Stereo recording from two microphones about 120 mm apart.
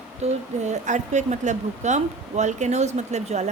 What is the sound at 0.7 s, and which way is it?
A woman's voice, 80° right.